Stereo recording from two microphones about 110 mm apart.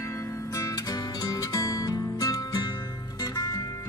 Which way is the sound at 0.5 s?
30° left (ahead or behind).